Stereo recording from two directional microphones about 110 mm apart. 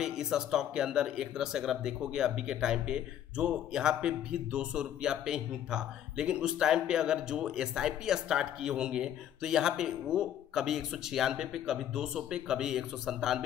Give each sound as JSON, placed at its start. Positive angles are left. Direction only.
{"t": 0.0, "sound": "speech", "side_deg": -5}